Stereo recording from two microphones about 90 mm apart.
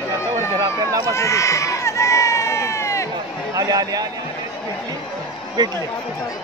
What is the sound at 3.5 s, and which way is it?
Speech, 45° right (ahead or behind).